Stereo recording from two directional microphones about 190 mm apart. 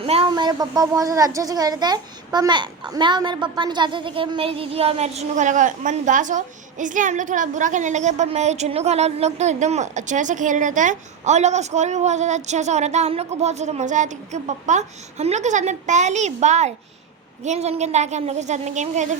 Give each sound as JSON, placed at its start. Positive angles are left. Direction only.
{"t": 0.0, "sound": "a woman's voice", "side_deg": -30}